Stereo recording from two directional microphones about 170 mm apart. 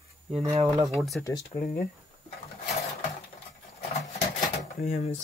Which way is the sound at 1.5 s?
50° left (ahead or behind).